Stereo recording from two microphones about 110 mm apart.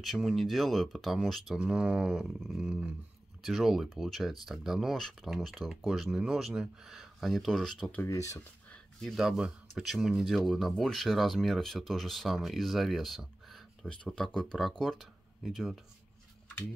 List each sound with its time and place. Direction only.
0.0 s speech: centre (ahead or behind)
8.1 s speech: 30° left (ahead or behind)
9.0 s speech: 5° right (ahead or behind)